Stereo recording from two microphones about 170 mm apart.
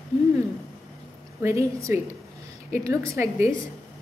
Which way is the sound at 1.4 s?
15° right (ahead or behind).